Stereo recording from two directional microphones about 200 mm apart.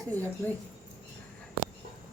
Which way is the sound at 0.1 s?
10° left (ahead or behind).